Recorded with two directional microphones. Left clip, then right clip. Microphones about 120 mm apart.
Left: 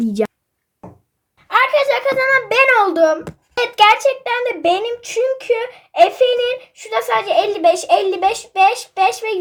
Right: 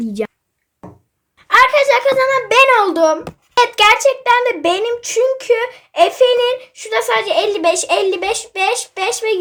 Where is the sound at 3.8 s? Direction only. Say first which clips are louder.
Left 2 dB; 25° right (ahead or behind).